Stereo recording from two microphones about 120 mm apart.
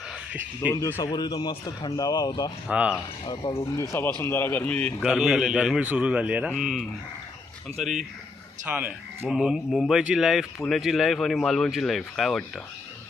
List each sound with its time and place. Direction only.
0.9 s a man's voice: 20° left (ahead or behind)
1.1 s a man's voice: 35° left (ahead or behind)
2.6 s a man's voice: 10° right (ahead or behind)
3.5 s a man's voice: 20° left (ahead or behind)
5.0 s a man's voice: 5° right (ahead or behind)
8.6 s a man's voice: 15° right (ahead or behind)
9.3 s speech: 5° right (ahead or behind)